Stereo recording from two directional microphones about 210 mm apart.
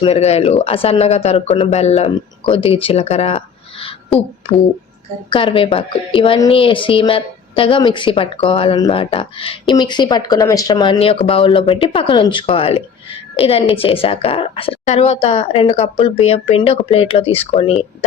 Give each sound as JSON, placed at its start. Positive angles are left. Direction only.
{"t": 0.0, "sound": "a woman's voice", "side_deg": 30}
{"t": 5.3, "sound": "a woman's voice", "side_deg": 25}